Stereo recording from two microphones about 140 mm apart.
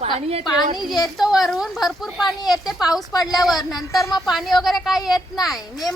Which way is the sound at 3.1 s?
25° left (ahead or behind).